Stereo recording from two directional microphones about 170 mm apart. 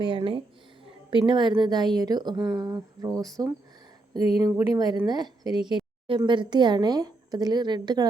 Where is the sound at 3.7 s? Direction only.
25° right (ahead or behind).